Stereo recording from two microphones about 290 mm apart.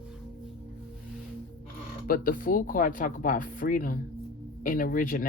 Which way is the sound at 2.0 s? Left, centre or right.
Left.